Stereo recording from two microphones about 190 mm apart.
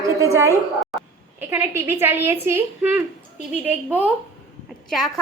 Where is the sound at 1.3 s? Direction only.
10° right (ahead or behind).